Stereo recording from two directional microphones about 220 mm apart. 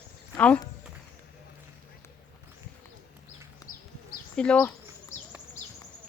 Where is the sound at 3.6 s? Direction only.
15° left (ahead or behind).